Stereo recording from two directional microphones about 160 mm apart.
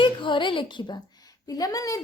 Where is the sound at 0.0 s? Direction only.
30° left (ahead or behind).